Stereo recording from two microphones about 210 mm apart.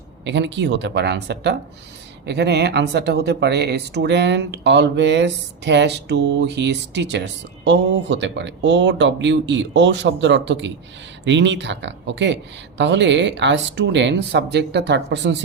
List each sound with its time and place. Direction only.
0.3 s speech: 60° right (ahead or behind)